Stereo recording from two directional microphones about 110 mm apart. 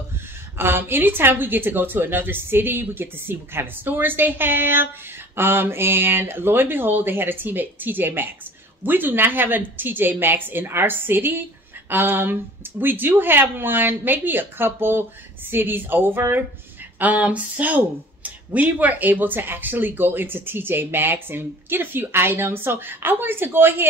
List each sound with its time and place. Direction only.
0.6 s speech: 20° right (ahead or behind)